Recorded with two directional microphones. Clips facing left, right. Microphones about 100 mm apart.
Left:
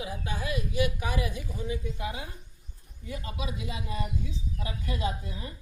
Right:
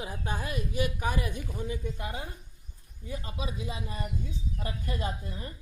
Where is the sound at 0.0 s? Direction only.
45° right (ahead or behind).